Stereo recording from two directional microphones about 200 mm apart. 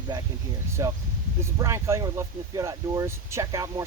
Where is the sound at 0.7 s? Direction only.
15° right (ahead or behind).